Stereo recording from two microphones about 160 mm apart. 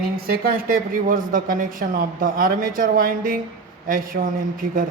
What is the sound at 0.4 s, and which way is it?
A man's voice, 65° right (ahead or behind).